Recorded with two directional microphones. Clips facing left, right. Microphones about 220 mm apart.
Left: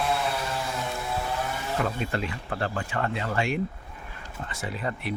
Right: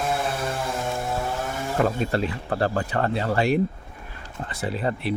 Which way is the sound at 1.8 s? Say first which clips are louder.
Right 6 dB; 40° right (ahead or behind).